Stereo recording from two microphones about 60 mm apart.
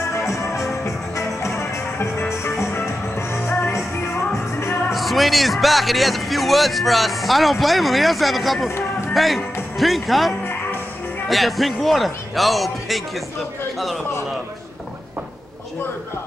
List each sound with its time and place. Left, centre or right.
0.3 s music: left
4.9 s a man's voice: centre